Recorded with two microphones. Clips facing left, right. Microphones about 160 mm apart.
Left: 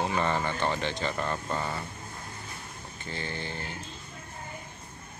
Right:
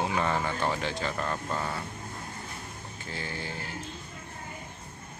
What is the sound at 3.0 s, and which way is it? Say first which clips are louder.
Speech: left 1 dB; 5° right (ahead or behind).